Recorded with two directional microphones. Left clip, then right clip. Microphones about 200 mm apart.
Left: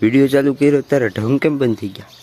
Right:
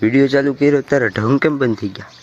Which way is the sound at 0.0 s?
25° left (ahead or behind).